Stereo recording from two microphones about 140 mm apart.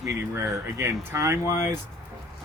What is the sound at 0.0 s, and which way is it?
Speech, 20° right (ahead or behind).